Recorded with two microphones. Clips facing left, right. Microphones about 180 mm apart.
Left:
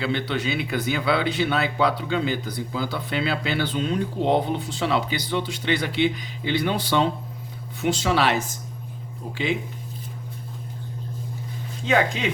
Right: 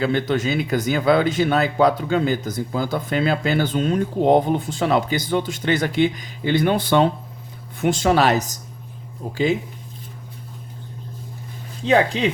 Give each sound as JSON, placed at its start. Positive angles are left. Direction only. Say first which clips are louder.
{"t": 0.0, "sound": "speech", "louder": "right 5 dB", "side_deg": -45}
{"t": 11.9, "sound": "speech", "louder": "right 4 dB", "side_deg": -35}